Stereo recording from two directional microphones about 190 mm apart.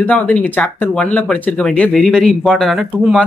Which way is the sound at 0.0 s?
10° left (ahead or behind).